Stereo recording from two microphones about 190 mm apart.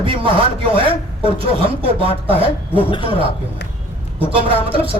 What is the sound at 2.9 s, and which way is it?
Speech, 25° left (ahead or behind).